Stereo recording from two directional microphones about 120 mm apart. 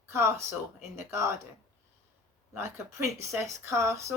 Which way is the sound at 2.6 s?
25° right (ahead or behind).